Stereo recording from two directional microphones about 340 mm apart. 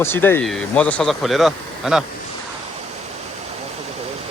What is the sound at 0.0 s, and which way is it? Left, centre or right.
Speech, centre.